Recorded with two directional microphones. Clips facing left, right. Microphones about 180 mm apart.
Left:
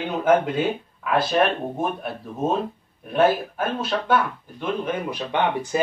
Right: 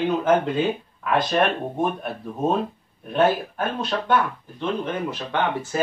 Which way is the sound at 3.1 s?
5° left (ahead or behind).